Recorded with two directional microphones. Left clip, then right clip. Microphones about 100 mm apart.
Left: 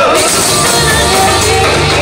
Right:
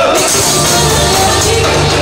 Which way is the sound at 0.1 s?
30° left (ahead or behind).